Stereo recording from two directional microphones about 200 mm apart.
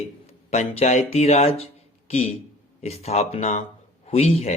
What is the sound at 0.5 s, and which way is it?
Speech, 30° left (ahead or behind).